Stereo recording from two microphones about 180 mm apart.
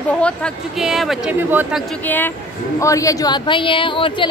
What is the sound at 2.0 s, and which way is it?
A woman's voice, 10° left (ahead or behind).